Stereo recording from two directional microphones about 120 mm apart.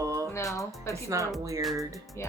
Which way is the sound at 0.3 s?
25° left (ahead or behind).